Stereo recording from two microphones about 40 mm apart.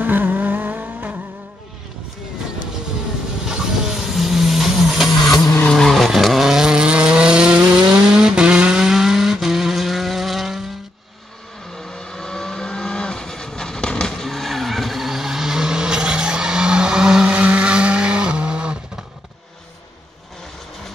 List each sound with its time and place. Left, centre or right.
0.0 s vehicle: right
3.4 s vehicle: centre
5.2 s vehicle: centre
5.9 s chainsaw: centre
11.7 s vehicle: centre; by 17.3 s right
17.3 s vehicle: right